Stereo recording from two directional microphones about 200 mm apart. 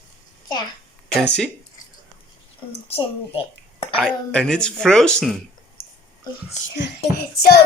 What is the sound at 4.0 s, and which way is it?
Speech, 5° left (ahead or behind).